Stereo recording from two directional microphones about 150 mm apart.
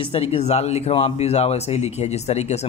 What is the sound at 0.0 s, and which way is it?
Speech, 40° left (ahead or behind).